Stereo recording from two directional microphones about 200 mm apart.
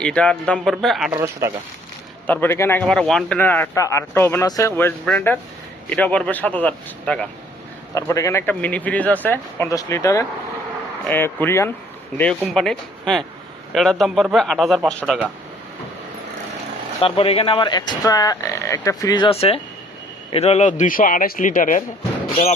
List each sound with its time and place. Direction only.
0.0 s a man's voice: 5° left (ahead or behind)
1.1 s speech: 10° right (ahead or behind)
2.2 s speech: 10° left (ahead or behind)
7.9 s a man's voice: 15° left (ahead or behind); by 15.3 s 5° right (ahead or behind)
17.0 s a man's voice: 30° left (ahead or behind)